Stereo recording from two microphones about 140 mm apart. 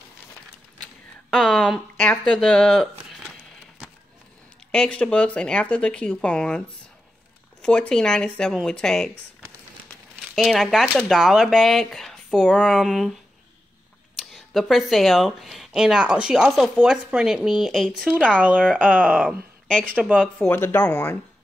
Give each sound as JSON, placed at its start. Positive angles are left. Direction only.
{"t": 1.3, "sound": "speech", "side_deg": 5}
{"t": 4.6, "sound": "speech", "side_deg": 5}
{"t": 7.6, "sound": "speech", "side_deg": 5}
{"t": 10.3, "sound": "speech", "side_deg": 0}
{"t": 14.3, "sound": "speech", "side_deg": 0}
{"t": 18.9, "sound": "speech", "side_deg": -10}
{"t": 19.1, "sound": "speech", "side_deg": 5}
{"t": 19.9, "sound": "speech", "side_deg": -10}
{"t": 20.2, "sound": "speech", "side_deg": 5}